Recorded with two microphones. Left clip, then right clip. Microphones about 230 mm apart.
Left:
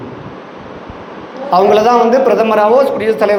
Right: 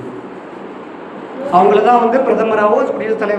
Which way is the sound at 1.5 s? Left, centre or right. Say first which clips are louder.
Left 1 dB; left.